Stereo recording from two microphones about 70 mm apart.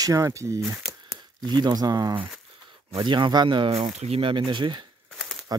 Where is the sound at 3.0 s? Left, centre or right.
Right.